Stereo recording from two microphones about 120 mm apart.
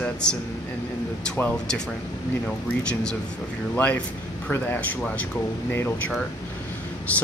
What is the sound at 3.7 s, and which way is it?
Speech, 10° left (ahead or behind).